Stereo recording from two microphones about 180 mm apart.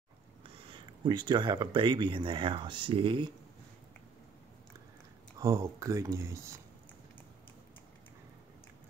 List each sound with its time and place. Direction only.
0.7 s speech: 25° right (ahead or behind)
5.4 s speech: 15° right (ahead or behind)